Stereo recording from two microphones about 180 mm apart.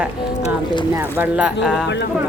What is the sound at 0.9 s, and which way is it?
Speech, 10° right (ahead or behind).